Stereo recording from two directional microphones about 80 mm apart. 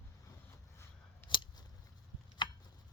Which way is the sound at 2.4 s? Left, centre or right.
Left.